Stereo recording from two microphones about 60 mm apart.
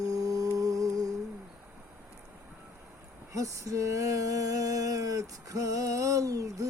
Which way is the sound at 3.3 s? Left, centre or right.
Right.